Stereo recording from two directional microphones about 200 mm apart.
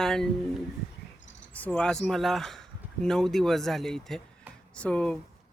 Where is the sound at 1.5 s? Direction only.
5° left (ahead or behind).